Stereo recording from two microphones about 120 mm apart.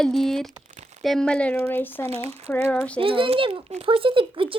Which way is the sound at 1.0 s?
5° left (ahead or behind).